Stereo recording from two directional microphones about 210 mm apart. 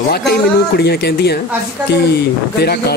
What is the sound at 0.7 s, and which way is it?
Speech, 50° left (ahead or behind).